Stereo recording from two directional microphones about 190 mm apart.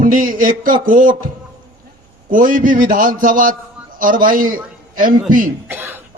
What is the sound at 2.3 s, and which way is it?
A man's voice, 45° right (ahead or behind).